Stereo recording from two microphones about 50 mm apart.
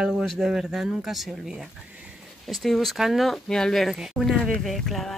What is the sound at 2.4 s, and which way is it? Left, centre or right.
Speech, centre.